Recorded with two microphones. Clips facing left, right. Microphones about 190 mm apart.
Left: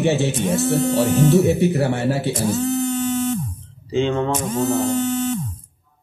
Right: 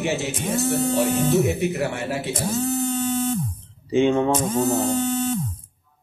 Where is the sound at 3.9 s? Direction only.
15° right (ahead or behind).